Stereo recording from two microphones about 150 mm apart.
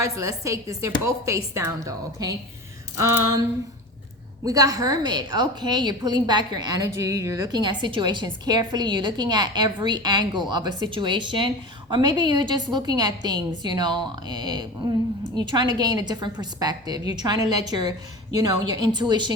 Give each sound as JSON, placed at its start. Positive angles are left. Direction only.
{"t": 0.0, "sound": "a woman's voice", "side_deg": -20}
{"t": 4.4, "sound": "a woman's voice", "side_deg": -25}